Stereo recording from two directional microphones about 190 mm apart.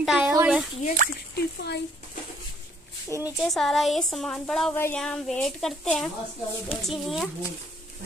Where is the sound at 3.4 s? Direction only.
Centre (ahead or behind).